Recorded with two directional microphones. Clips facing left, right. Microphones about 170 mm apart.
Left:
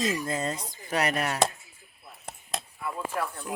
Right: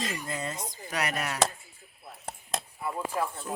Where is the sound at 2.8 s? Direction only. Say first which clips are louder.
Right 1 dB; 20° right (ahead or behind).